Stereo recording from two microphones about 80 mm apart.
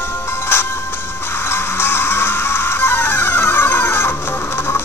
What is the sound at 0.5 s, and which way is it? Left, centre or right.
Music, left.